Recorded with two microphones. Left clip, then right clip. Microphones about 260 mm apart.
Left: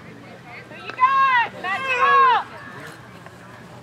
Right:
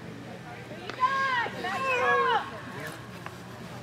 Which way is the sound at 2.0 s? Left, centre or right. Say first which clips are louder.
Left 11 dB; left.